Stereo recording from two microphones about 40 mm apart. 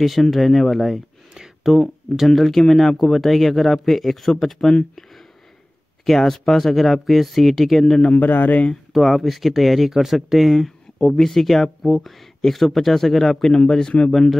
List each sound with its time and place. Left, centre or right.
0.0 s speech: centre
1.3 s a sound: centre
1.7 s speech: centre
6.0 s speech: centre
8.1 s speech: left
8.9 s speech: centre
11.0 s speech: centre